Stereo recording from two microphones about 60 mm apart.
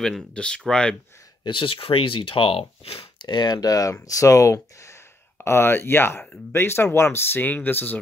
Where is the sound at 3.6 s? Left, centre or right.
Left.